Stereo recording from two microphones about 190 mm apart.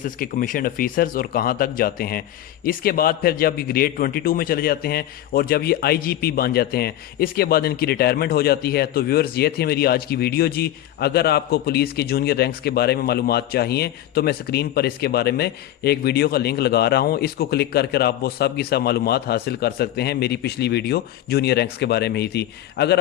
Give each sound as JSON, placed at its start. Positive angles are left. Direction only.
{"t": 0.0, "sound": "a man's voice", "side_deg": 45}